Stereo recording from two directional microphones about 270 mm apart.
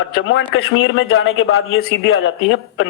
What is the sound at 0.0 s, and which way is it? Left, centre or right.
Speech, left.